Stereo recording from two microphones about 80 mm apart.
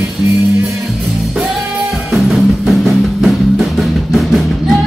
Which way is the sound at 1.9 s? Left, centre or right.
Centre.